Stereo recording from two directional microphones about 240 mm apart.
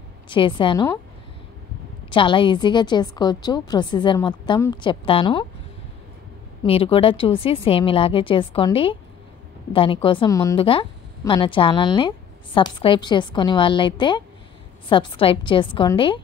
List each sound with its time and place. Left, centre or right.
0.3 s a woman's voice: left
2.0 s a woman's voice: left
6.6 s a woman's voice: left